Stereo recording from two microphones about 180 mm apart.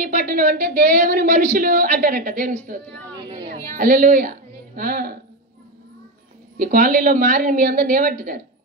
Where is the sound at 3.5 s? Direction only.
50° right (ahead or behind).